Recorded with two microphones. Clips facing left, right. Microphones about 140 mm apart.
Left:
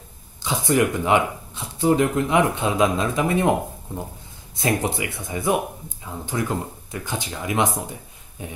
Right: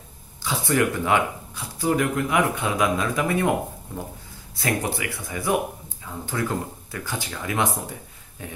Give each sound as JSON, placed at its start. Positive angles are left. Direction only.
{"t": 0.4, "sound": "speech", "side_deg": 20}